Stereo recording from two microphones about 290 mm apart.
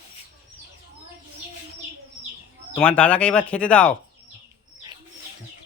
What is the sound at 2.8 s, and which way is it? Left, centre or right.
Speech, centre.